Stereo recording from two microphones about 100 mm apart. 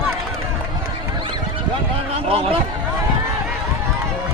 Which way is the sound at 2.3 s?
70° right (ahead or behind).